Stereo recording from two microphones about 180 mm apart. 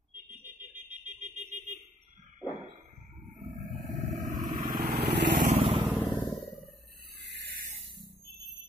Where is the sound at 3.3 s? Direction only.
45° right (ahead or behind).